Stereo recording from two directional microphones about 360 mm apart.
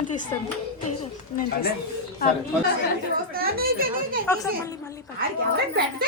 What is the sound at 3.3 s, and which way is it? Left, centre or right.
Speech, right.